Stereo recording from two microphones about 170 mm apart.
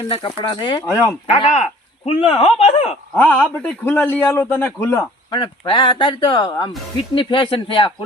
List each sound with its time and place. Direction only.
0.1 s speech: 30° left (ahead or behind)
1.3 s speech: 40° left (ahead or behind)
3.2 s a man's voice: 10° left (ahead or behind)
5.4 s speech: 30° left (ahead or behind)